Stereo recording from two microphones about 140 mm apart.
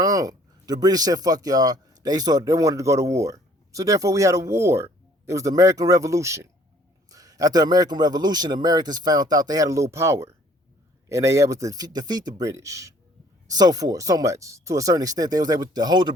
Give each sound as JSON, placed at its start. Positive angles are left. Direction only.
{"t": 0.0, "sound": "a man's voice", "side_deg": -25}